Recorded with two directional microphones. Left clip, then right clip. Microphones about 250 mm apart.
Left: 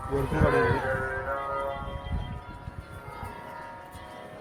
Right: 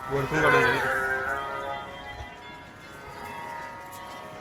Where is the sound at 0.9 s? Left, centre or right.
Left.